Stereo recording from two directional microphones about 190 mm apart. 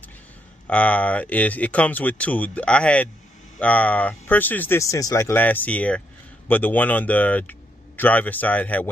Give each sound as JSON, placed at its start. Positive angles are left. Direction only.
{"t": 0.7, "sound": "speech", "side_deg": 5}